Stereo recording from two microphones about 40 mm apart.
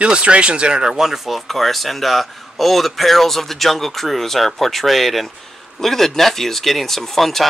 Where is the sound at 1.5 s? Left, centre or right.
Centre.